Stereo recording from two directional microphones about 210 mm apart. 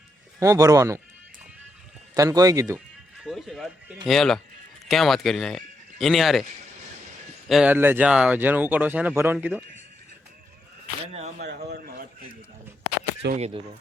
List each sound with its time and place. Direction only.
0.3 s speech: 15° right (ahead or behind)
2.1 s speech: 15° right (ahead or behind)
3.2 s speech: centre (ahead or behind)
7.4 s speech: 5° right (ahead or behind)
11.0 s speech: 30° right (ahead or behind)
11.4 s a man's voice: 45° right (ahead or behind)
13.3 s speech: 30° right (ahead or behind)